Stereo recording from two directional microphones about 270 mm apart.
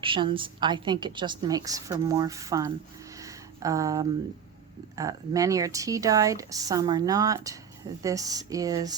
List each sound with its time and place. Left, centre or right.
0.0 s a woman's voice: centre
3.2 s a sound: centre
4.9 s a woman's voice: centre